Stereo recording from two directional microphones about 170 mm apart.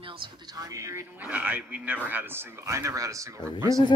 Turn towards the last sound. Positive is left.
turn(degrees=-15)  # may be behind; listen again after turning